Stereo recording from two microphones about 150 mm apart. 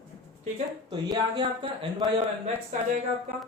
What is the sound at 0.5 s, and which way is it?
Speech, 35° right (ahead or behind).